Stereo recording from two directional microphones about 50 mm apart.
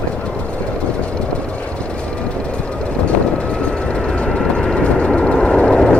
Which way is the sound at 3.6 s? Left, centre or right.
Centre.